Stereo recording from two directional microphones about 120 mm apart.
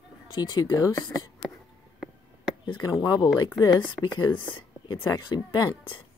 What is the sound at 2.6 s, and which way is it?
Speech, 40° left (ahead or behind).